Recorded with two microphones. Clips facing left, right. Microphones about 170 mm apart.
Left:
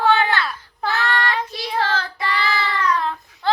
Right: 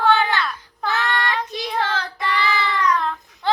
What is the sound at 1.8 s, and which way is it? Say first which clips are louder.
Child singing: left 2 dB; 20° right (ahead or behind).